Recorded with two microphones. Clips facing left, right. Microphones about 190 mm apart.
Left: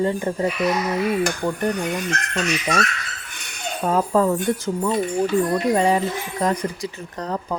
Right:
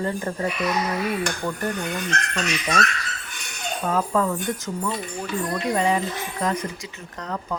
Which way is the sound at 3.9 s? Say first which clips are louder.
Left 4 dB; 30° left (ahead or behind).